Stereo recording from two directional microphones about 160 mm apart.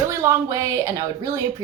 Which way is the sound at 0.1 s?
20° right (ahead or behind).